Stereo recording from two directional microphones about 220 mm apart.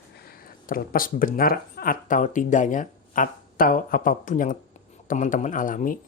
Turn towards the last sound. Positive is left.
turn(degrees=35)  # may be behind; listen again after turning